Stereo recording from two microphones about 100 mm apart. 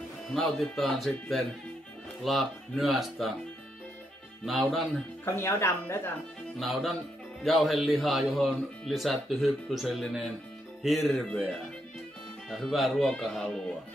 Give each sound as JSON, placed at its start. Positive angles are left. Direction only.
{"t": 0.3, "sound": "speech", "side_deg": 0}
{"t": 4.5, "sound": "speech", "side_deg": 0}
{"t": 5.2, "sound": "speech", "side_deg": 25}
{"t": 6.6, "sound": "speech", "side_deg": 0}